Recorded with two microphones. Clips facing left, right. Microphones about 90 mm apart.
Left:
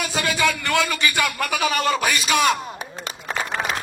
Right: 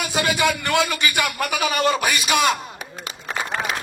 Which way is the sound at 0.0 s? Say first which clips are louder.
Right 1 dB; 15° right (ahead or behind).